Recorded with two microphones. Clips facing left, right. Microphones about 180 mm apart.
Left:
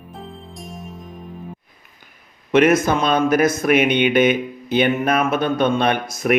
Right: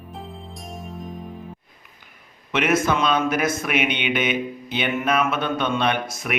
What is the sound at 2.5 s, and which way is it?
Speech, 40° left (ahead or behind).